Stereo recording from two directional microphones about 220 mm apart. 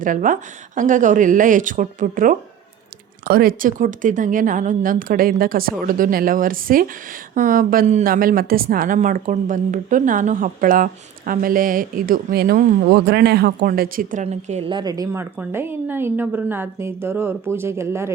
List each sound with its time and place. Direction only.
0.0 s a woman's voice: 35° right (ahead or behind); by 18.1 s 10° right (ahead or behind)